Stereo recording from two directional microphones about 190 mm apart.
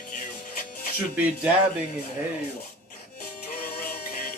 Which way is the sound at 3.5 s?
50° left (ahead or behind).